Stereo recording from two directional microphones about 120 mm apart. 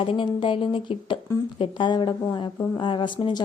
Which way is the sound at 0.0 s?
45° left (ahead or behind).